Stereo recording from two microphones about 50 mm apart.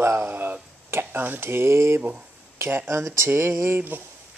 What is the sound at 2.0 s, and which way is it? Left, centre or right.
Speech, right.